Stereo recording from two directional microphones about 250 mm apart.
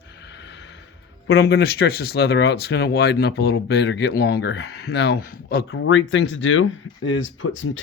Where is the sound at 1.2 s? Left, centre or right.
Left.